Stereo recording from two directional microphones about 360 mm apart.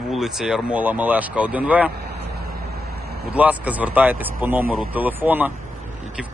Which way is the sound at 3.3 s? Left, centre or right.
Centre.